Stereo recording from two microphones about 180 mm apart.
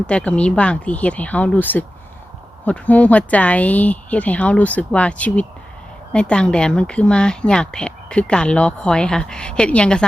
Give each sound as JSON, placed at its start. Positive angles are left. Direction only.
{"t": 0.1, "sound": "speech", "side_deg": 5}